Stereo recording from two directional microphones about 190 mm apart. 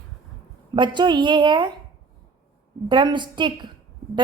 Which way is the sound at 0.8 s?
25° right (ahead or behind).